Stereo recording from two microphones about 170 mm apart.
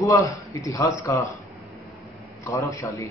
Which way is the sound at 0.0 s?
20° left (ahead or behind).